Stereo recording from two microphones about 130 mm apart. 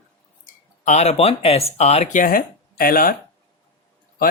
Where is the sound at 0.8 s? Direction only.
60° left (ahead or behind); by 3.1 s 90° left.